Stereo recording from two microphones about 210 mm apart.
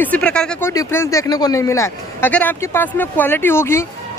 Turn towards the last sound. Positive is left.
turn(degrees=10)  # may be behind; listen again after turning